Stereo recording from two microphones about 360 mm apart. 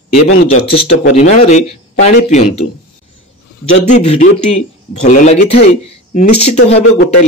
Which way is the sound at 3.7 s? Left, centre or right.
Centre.